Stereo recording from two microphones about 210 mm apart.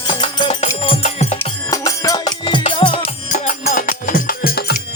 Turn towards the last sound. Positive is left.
turn(degrees=45)  # may be behind; listen again after turning